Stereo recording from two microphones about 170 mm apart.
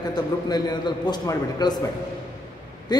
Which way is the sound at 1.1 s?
25° left (ahead or behind).